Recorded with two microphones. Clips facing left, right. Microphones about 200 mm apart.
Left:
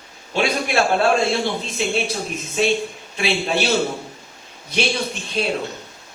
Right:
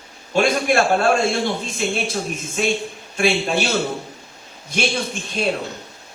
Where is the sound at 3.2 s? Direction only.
50° right (ahead or behind).